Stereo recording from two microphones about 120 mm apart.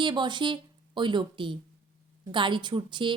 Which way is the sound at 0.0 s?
40° right (ahead or behind).